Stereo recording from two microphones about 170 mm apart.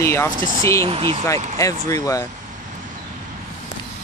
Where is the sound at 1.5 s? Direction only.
20° left (ahead or behind).